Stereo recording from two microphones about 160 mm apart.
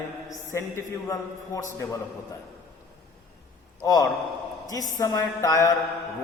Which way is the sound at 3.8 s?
20° left (ahead or behind).